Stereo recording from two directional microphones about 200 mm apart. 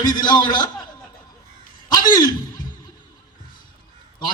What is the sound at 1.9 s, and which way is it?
Speech, 20° left (ahead or behind).